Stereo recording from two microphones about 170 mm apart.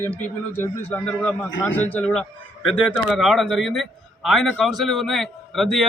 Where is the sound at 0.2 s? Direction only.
10° left (ahead or behind).